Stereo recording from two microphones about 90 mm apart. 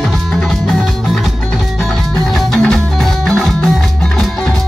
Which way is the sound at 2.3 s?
5° left (ahead or behind).